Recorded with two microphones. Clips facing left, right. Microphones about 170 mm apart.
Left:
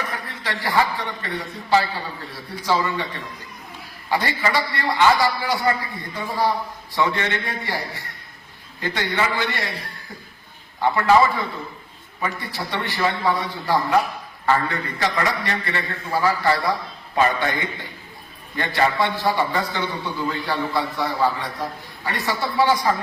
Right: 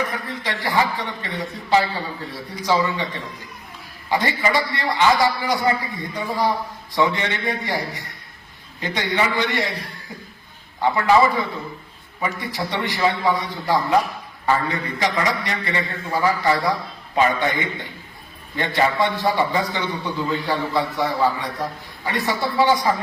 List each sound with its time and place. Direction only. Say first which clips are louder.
0.0 s a man's voice: right 4 dB; 20° right (ahead or behind)
4.1 s a man's voice: right 1 dB; 20° right (ahead or behind)